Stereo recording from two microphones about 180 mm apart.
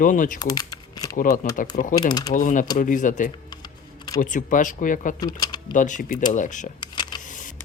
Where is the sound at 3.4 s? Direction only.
20° left (ahead or behind).